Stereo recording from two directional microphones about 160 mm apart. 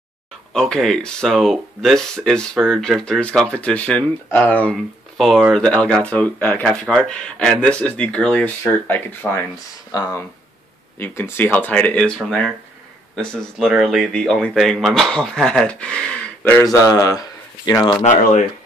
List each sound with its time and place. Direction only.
0.5 s speech: 5° left (ahead or behind)
16.6 s speech: 20° left (ahead or behind)
18.0 s speech: 50° left (ahead or behind)